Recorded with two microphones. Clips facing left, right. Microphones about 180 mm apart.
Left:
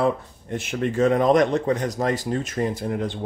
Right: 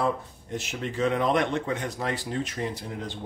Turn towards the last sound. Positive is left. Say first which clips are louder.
# left 8 dB
turn(degrees=55)  # may be behind; listen again after turning